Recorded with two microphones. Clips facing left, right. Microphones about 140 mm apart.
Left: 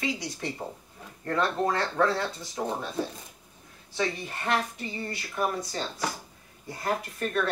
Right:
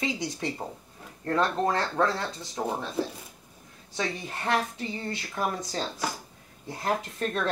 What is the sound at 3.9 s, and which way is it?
Speech, 25° right (ahead or behind).